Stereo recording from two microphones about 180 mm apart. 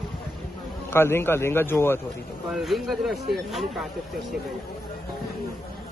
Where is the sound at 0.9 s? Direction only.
15° left (ahead or behind).